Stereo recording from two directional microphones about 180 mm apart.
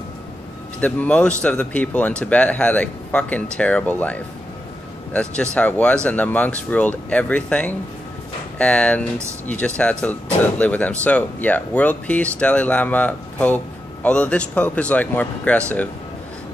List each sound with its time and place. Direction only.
0.7 s speech: 10° left (ahead or behind)